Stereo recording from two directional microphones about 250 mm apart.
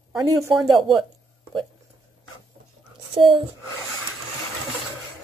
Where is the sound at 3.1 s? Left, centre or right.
Centre.